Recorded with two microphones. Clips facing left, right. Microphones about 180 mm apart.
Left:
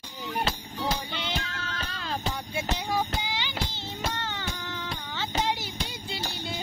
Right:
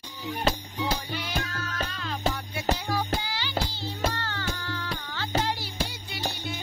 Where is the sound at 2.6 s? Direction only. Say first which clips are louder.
Left 3 dB; 20° left (ahead or behind).